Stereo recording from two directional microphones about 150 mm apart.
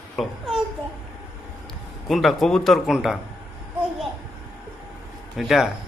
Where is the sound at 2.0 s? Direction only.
Centre (ahead or behind).